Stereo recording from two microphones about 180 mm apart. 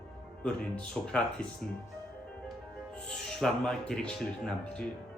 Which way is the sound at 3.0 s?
5° left (ahead or behind).